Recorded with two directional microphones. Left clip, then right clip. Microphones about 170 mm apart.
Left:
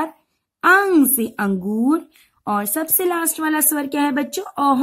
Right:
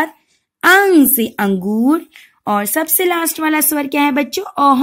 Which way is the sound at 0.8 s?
10° right (ahead or behind).